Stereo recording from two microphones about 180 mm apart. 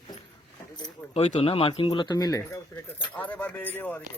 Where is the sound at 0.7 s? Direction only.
35° left (ahead or behind); by 4.0 s 10° left (ahead or behind).